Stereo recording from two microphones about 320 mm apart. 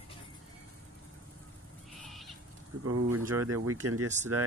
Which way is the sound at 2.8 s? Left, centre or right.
Right.